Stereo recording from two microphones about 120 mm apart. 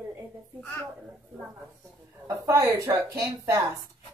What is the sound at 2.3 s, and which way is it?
Speech, 25° right (ahead or behind).